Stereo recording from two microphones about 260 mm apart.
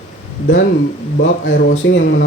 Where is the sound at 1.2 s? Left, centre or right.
Left.